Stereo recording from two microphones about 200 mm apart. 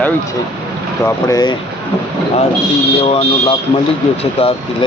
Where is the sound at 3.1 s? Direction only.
30° left (ahead or behind).